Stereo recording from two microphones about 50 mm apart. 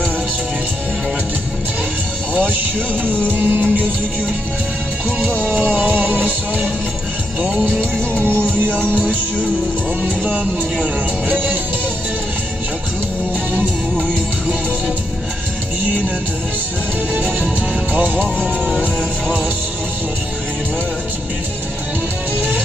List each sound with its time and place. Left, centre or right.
2.3 s music: right
3.1 s music: left
3.3 s music: right
5.7 s music: right
7.9 s music: left
17.2 s music: right
22.4 s music: right